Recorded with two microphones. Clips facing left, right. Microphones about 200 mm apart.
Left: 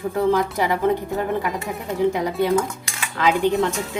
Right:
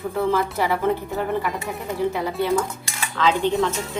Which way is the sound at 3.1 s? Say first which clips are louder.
Left 1 dB; 15° left (ahead or behind).